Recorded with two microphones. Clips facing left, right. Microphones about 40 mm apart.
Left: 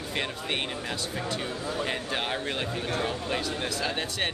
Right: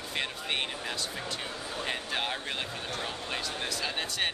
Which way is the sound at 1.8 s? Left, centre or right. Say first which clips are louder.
Left 1 dB; centre.